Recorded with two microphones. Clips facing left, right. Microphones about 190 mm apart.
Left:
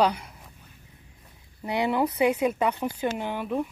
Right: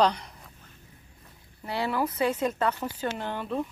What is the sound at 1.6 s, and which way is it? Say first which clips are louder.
Speech: left 4 dB; 20° left (ahead or behind).